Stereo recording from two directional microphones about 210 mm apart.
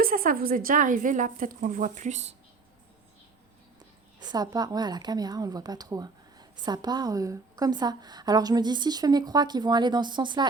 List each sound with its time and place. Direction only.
0.0 s a woman's voice: 40° right (ahead or behind)
4.2 s speech: 20° right (ahead or behind)